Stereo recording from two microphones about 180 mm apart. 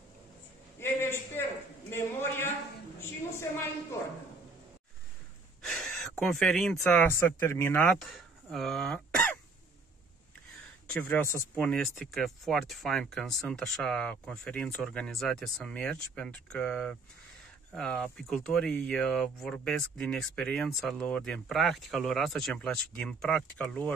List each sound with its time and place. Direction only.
0.7 s a sound: 15° left (ahead or behind)
1.9 s a woman's voice: 15° left (ahead or behind)
5.6 s speech: 5° left (ahead or behind)
10.9 s speech: 10° left (ahead or behind)